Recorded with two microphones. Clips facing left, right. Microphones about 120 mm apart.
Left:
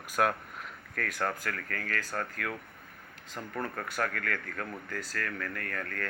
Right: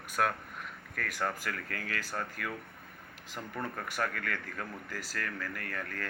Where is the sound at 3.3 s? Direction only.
Centre (ahead or behind).